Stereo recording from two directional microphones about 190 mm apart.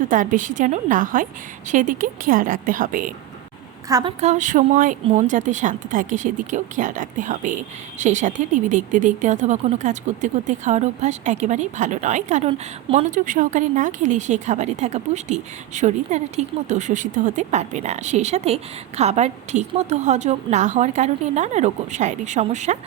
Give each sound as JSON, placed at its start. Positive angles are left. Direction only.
{"t": 0.1, "sound": "a woman's voice", "side_deg": -45}
{"t": 3.8, "sound": "a woman's voice", "side_deg": -20}
{"t": 4.2, "sound": "speech", "side_deg": -40}